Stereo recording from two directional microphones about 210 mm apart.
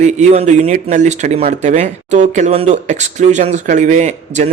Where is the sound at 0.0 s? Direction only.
30° right (ahead or behind).